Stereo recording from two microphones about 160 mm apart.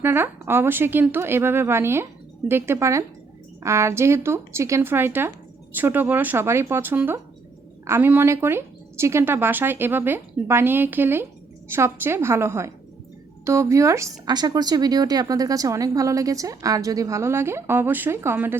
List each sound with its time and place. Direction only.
0.0 s speech: 15° right (ahead or behind)